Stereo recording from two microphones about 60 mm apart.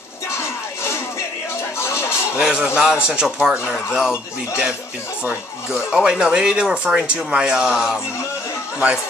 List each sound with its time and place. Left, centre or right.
1.8 s music: left
2.3 s speech: centre